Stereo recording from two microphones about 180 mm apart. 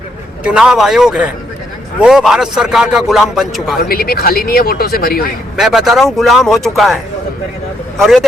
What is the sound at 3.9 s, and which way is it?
Speech, 55° left (ahead or behind).